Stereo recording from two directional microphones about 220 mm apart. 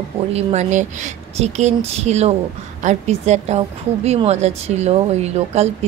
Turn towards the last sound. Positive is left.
turn(degrees=-30)  # may be behind; listen again after turning